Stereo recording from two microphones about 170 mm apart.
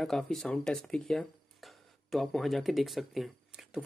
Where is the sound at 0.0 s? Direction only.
Centre (ahead or behind).